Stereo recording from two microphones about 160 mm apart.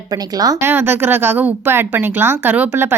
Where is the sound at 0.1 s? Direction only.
25° right (ahead or behind).